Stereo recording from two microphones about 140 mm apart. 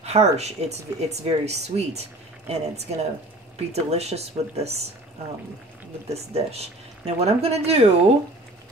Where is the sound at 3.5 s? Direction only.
50° right (ahead or behind).